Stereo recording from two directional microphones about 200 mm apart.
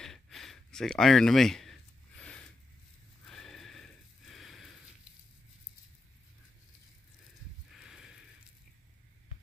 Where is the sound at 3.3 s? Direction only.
Centre (ahead or behind).